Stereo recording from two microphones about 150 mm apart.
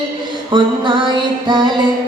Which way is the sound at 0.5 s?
30° right (ahead or behind).